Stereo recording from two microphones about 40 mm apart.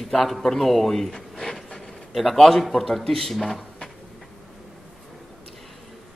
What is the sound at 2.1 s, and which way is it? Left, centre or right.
Mantra, centre.